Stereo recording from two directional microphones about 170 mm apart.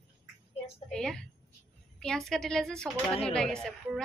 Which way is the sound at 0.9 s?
5° left (ahead or behind).